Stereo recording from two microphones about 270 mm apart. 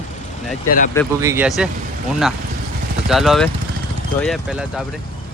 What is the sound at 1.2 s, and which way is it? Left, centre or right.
Speech, centre.